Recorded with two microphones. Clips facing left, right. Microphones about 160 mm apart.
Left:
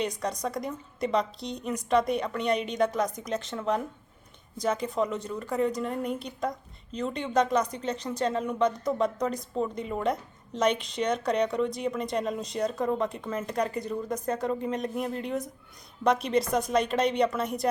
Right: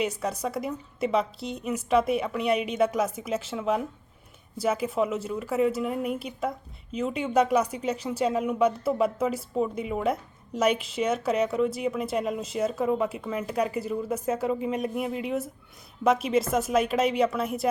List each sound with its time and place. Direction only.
0.0 s a woman's voice: 5° right (ahead or behind)